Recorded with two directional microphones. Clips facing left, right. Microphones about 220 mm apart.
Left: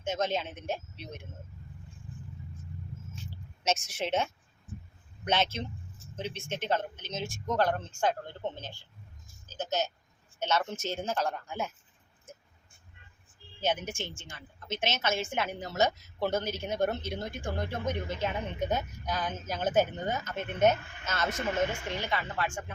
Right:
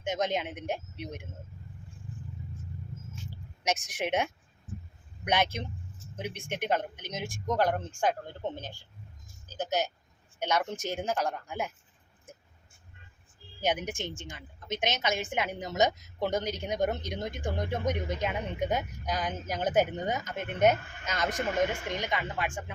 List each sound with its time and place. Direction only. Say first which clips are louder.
0.0 s a woman's voice: right 1 dB; 15° right (ahead or behind)
3.6 s a woman's voice: even; 15° right (ahead or behind)
13.6 s a woman's voice: right 1 dB; 15° right (ahead or behind)